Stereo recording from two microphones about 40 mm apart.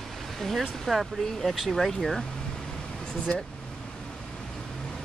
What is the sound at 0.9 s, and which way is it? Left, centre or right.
Speech, centre.